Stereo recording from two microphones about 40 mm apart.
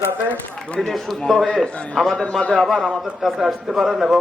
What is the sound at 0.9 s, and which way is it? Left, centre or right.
A man's voice, centre.